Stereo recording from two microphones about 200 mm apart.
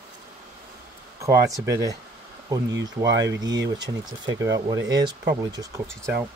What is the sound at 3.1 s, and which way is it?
Speech, 60° right (ahead or behind).